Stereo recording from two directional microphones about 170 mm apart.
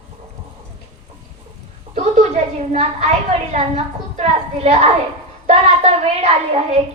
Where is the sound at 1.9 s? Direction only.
40° right (ahead or behind).